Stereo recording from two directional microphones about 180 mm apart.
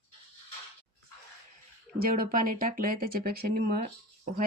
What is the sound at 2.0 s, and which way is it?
Speech, 55° right (ahead or behind).